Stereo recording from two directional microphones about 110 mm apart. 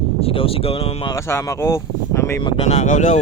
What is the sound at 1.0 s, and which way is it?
Speech, 25° left (ahead or behind).